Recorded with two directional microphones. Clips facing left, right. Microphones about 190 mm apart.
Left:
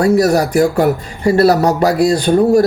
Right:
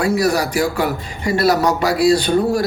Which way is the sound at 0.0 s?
45° left (ahead or behind).